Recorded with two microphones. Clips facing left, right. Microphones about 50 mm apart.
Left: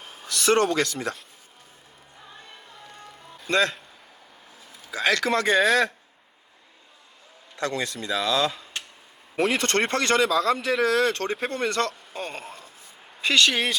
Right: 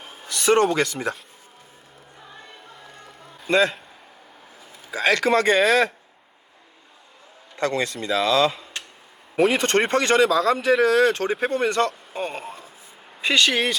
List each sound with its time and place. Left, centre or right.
0.3 s speech: centre
3.4 s a man's voice: centre
4.9 s a man's voice: centre
7.6 s speech: right
7.9 s a man's voice: centre
8.2 s speech: right
9.3 s a man's voice: centre